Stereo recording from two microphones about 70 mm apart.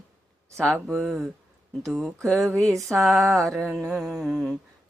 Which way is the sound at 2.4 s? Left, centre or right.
Right.